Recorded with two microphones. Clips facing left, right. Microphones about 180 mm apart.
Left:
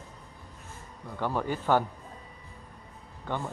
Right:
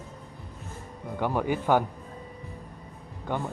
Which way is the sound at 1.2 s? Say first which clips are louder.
Right 3 dB; 15° right (ahead or behind).